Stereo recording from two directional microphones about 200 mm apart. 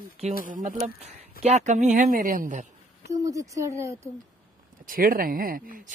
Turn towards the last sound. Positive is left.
turn(degrees=-45)  # may be behind; listen again after turning